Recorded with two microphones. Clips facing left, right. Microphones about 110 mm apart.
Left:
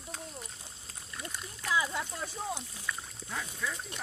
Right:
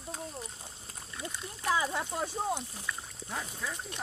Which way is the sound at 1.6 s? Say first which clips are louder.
Right 2 dB; 40° right (ahead or behind).